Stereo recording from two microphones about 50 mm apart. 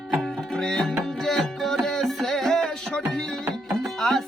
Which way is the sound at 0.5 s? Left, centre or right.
Centre.